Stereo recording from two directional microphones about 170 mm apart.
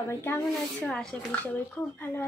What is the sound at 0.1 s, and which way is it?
Speech, 10° left (ahead or behind).